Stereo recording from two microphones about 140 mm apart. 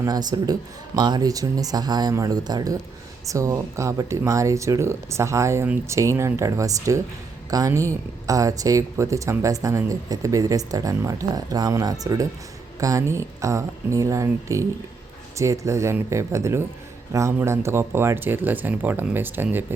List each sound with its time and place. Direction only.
0.0 s speech: 30° right (ahead or behind)